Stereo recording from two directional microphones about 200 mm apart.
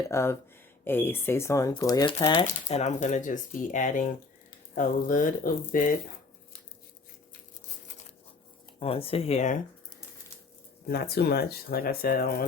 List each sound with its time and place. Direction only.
0.1 s speech: 15° left (ahead or behind)
2.5 s speech: 35° left (ahead or behind)
8.8 s speech: 30° left (ahead or behind)
10.8 s speech: 50° left (ahead or behind)